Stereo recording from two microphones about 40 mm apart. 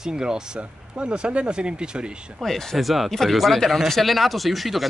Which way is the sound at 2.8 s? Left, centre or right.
Centre.